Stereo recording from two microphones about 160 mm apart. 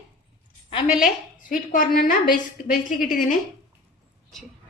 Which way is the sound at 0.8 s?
5° right (ahead or behind).